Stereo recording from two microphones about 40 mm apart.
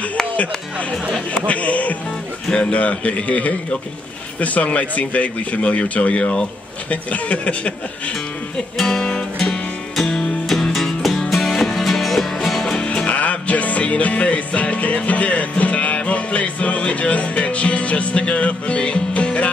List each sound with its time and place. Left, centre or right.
1.3 s speech: left
8.8 s music: centre
12.7 s music: left
13.1 s music: left